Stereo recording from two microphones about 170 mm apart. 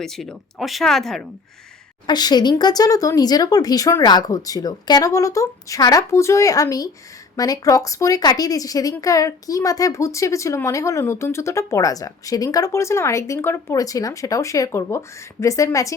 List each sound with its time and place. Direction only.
0.0 s speech: centre (ahead or behind)
2.0 s a woman's voice: 25° left (ahead or behind)